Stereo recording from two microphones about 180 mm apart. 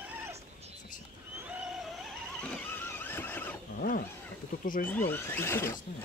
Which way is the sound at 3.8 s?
50° left (ahead or behind).